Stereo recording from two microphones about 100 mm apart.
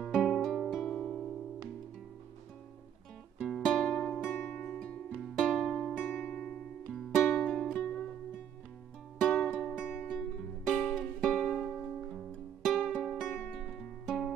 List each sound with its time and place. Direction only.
0.0 s music: centre (ahead or behind)
3.3 s music: 5° right (ahead or behind)
4.2 s music: 20° left (ahead or behind); by 5.9 s centre (ahead or behind)
5.9 s music: 20° left (ahead or behind)
6.9 s music: centre (ahead or behind)
7.2 s music: 10° left (ahead or behind)
9.6 s music: 10° left (ahead or behind)
10.1 s music: 5° right (ahead or behind)